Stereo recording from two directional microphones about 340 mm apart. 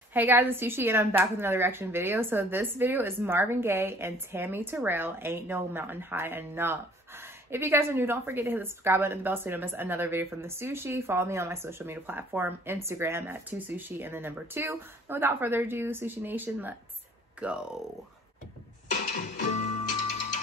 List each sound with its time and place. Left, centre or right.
0.1 s a woman's voice: centre
18.9 s music: left